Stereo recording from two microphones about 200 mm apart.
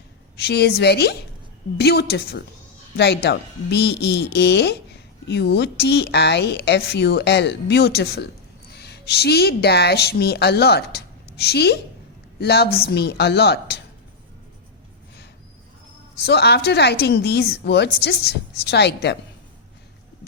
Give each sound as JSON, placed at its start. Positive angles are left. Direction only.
{"t": 0.4, "sound": "a woman's voice", "side_deg": 55}
{"t": 16.2, "sound": "a woman's voice", "side_deg": 55}